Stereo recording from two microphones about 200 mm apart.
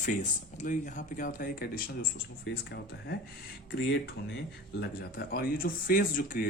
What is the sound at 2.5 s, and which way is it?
Speech, 55° left (ahead or behind).